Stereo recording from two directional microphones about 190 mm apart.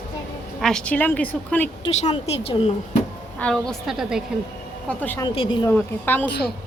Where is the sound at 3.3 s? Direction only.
5° left (ahead or behind).